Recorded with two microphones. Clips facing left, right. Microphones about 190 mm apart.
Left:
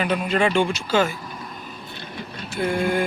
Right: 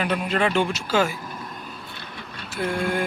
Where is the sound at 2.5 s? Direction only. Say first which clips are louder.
Left 3 dB; centre (ahead or behind).